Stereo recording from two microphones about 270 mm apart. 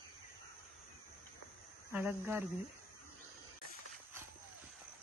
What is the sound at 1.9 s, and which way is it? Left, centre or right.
Speech, centre.